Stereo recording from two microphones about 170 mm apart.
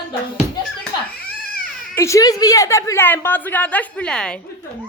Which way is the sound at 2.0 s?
20° left (ahead or behind).